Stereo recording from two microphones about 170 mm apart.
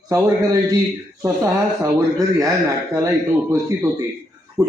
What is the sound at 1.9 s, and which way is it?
A man's voice, 20° right (ahead or behind).